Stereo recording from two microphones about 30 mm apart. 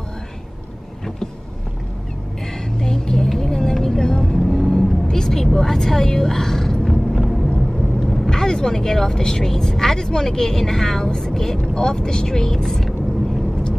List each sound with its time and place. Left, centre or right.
2.8 s vehicle: centre
8.3 s speech: left
12.6 s vehicle: centre